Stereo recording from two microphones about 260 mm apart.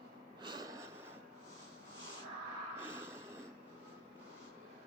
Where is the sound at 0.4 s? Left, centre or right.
Centre.